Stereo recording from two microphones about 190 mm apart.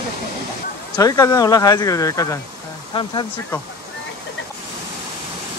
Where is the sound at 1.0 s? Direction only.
20° left (ahead or behind).